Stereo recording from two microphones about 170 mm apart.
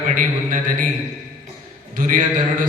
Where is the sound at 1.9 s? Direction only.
50° right (ahead or behind).